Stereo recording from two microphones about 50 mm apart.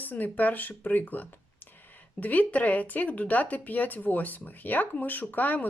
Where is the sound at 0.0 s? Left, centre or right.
Left.